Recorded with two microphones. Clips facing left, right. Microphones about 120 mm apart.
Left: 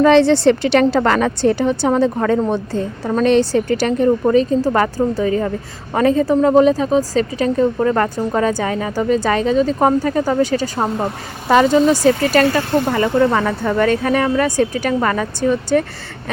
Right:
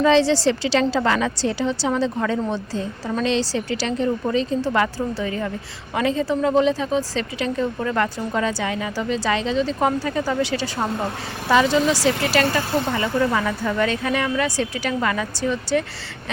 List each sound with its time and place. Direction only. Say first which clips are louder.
0.0 s a woman's voice: left 6 dB; 55° left (ahead or behind)